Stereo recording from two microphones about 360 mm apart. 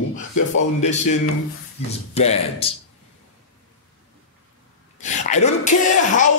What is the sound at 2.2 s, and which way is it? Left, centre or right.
Speech, centre.